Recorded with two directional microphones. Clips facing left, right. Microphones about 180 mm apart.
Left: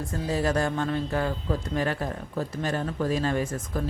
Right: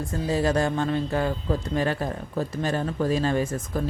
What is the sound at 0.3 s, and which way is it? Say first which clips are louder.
A woman's voice: right 2 dB; 25° right (ahead or behind).